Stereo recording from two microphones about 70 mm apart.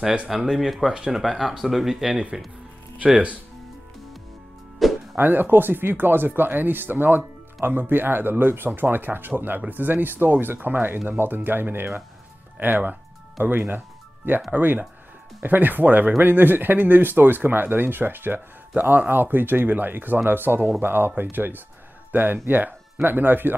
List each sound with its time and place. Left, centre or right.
0.0 s speech: centre
4.8 s music: centre
5.1 s speech: right